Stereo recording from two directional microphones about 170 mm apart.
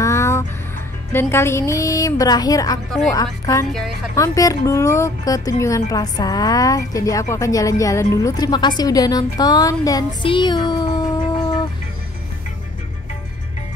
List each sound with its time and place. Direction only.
0.0 s music: 15° left (ahead or behind)
1.3 s speech: 15° left (ahead or behind)
4.1 s speech: 20° left (ahead or behind)